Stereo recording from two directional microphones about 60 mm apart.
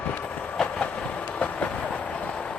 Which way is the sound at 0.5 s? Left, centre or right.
Centre.